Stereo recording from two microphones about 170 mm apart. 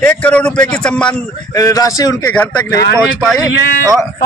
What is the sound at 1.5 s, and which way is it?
Speech, 20° left (ahead or behind).